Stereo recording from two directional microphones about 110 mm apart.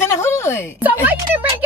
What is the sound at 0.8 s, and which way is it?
Speech, 15° right (ahead or behind).